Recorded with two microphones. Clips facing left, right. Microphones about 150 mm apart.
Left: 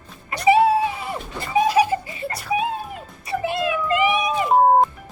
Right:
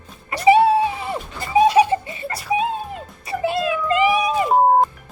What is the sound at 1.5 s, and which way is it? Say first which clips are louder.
Giggle: right 3 dB; 25° right (ahead or behind).